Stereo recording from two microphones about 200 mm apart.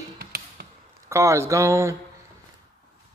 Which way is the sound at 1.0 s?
15° right (ahead or behind).